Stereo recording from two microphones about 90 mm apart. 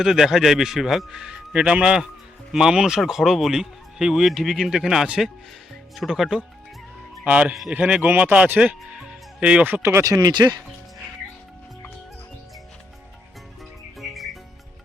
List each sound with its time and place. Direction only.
0.0 s speech: 5° right (ahead or behind)
7.3 s speech: 15° right (ahead or behind)
9.8 s speech: 35° right (ahead or behind)
14.0 s music: centre (ahead or behind)